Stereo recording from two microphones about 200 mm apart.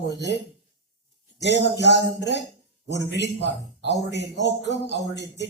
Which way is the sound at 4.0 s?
60° left (ahead or behind).